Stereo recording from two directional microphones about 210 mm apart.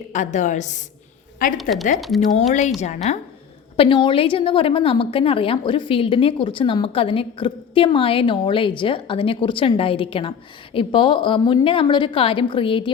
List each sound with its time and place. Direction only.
0.1 s a woman's voice: 35° left (ahead or behind)
2.0 s speech: centre (ahead or behind)
2.5 s a woman's voice: 35° left (ahead or behind)